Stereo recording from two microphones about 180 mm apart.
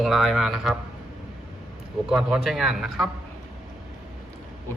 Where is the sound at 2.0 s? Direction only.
5° right (ahead or behind).